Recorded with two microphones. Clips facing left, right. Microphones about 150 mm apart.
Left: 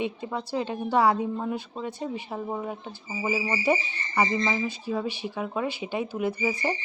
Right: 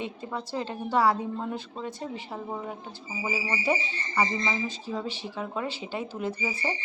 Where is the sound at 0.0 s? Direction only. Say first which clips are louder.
Left 4 dB; 15° left (ahead or behind).